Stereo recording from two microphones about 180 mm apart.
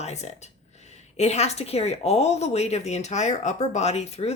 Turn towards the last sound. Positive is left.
turn(degrees=35)  # may be behind; listen again after turning